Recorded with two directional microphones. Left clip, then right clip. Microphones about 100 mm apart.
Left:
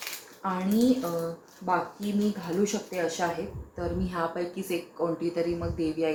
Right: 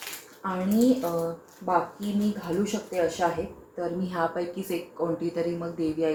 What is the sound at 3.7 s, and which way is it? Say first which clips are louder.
Speech: right 2 dB; 20° right (ahead or behind).